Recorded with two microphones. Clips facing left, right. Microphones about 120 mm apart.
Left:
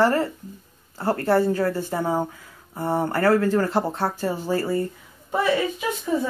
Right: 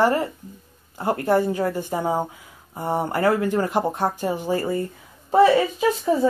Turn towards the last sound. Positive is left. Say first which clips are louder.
# right 5 dB
turn(degrees=-35)  # may be behind; listen again after turning